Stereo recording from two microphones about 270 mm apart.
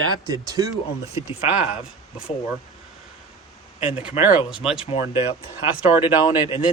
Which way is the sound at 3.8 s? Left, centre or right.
Centre.